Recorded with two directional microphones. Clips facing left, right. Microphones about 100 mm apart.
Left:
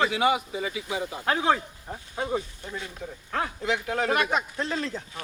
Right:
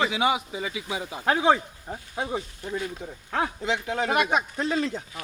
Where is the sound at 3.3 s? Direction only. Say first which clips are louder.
Right 1 dB; 20° right (ahead or behind).